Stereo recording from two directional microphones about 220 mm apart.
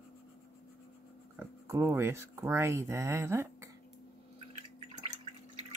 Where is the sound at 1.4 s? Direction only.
10° right (ahead or behind).